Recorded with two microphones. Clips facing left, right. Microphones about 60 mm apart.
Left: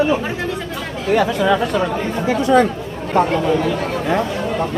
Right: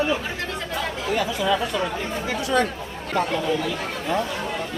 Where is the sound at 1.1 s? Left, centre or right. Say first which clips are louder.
Left 8 dB; left.